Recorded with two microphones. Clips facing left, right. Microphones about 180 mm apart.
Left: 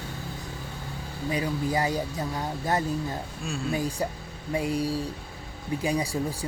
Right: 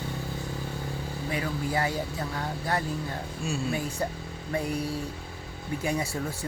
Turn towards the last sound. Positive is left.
turn(degrees=15)  # may be behind; listen again after turning